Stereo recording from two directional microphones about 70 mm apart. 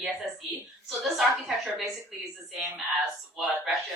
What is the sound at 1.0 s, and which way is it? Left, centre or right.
Speech, centre.